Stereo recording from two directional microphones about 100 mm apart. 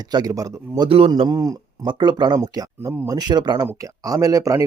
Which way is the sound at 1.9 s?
50° right (ahead or behind).